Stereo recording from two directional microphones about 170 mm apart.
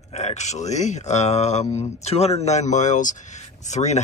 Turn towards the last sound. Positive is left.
turn(degrees=40)  # may be behind; listen again after turning